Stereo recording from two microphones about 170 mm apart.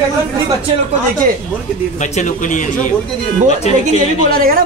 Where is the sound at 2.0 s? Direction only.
45° left (ahead or behind).